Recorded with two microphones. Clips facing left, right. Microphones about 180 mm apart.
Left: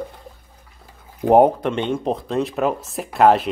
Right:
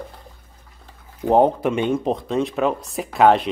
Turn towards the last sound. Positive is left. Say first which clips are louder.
# even
turn(degrees=0)  # may be behind; listen again after turning